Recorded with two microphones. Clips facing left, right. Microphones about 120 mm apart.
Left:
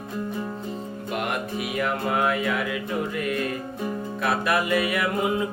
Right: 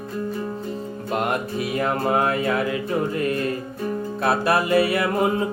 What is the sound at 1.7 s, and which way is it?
Music, 35° right (ahead or behind).